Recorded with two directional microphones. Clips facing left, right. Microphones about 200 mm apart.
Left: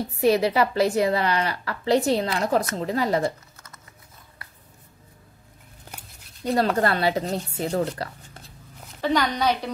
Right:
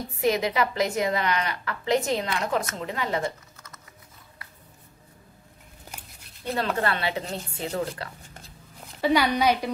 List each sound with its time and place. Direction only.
0.2 s a woman's voice: 35° left (ahead or behind)
6.4 s a woman's voice: 40° left (ahead or behind)
9.0 s a woman's voice: 10° right (ahead or behind)